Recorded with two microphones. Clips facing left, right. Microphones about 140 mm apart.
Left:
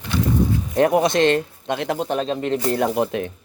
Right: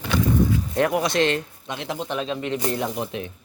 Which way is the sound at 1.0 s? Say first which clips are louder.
Left 4 dB; 45° left (ahead or behind).